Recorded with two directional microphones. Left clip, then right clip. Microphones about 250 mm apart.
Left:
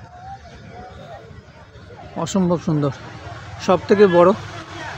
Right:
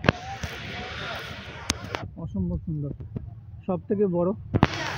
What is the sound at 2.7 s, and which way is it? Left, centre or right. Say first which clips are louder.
Speech: left 14 dB; left.